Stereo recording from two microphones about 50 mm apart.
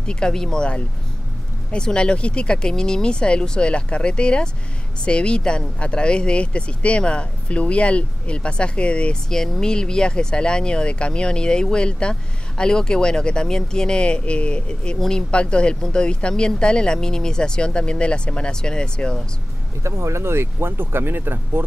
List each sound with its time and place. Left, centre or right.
0.0 s speech: centre
1.7 s speech: centre
9.3 s speech: centre
19.8 s speech: right